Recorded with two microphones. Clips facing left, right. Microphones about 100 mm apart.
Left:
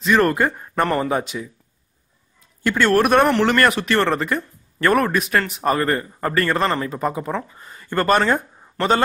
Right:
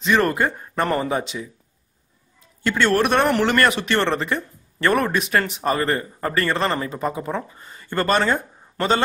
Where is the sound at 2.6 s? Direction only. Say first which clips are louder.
Left 2 dB; 5° left (ahead or behind).